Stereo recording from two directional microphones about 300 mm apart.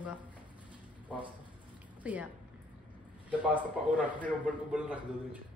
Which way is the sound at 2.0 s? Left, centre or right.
Centre.